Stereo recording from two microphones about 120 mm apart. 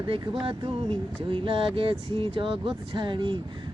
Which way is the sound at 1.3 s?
50° right (ahead or behind).